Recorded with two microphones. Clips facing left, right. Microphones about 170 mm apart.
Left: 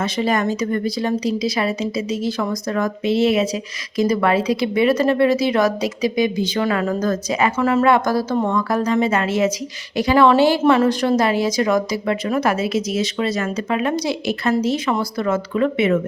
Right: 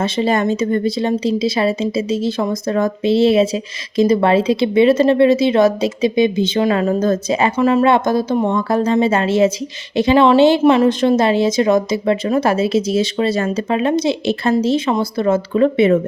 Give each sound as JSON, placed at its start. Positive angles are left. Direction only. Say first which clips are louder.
{"t": 0.0, "sound": "speech", "louder": "right 3 dB", "side_deg": -25}
{"t": 7.5, "sound": "speech", "louder": "right 3 dB", "side_deg": -15}